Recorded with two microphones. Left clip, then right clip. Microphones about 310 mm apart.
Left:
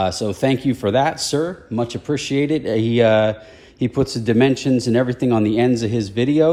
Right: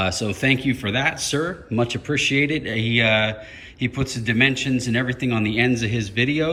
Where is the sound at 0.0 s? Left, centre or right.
Centre.